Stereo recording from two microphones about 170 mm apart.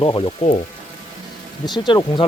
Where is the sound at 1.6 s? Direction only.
25° left (ahead or behind).